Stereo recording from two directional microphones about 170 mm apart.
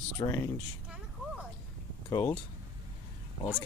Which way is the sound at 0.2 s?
25° left (ahead or behind).